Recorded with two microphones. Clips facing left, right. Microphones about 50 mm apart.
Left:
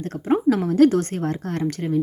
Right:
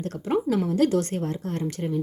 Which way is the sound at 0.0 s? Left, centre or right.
Left.